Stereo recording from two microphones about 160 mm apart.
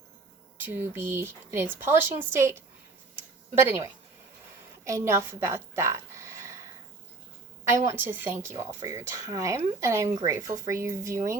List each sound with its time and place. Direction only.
0.5 s a woman's voice: 10° right (ahead or behind)
7.7 s speech: 15° right (ahead or behind)